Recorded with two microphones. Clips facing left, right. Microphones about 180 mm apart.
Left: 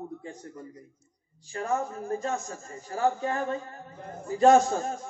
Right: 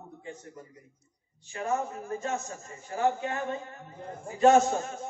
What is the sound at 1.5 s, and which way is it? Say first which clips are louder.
A man's voice: left 1 dB; 35° left (ahead or behind).